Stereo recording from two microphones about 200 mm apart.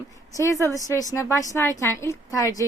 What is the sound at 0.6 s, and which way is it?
A woman's voice, 15° left (ahead or behind).